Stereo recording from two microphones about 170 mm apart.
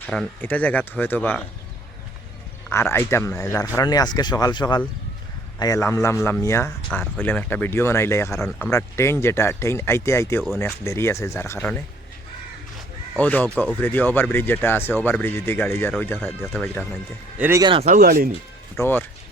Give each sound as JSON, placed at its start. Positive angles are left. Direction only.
{"t": 0.0, "sound": "speech", "side_deg": 5}
{"t": 2.6, "sound": "speech", "side_deg": 15}
{"t": 13.1, "sound": "speech", "side_deg": 10}
{"t": 17.3, "sound": "speech", "side_deg": -10}
{"t": 17.6, "sound": "speech", "side_deg": -30}
{"t": 17.8, "sound": "speech", "side_deg": -55}
{"t": 18.8, "sound": "speech", "side_deg": 10}